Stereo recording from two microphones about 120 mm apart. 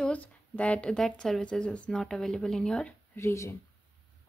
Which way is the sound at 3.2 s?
25° left (ahead or behind).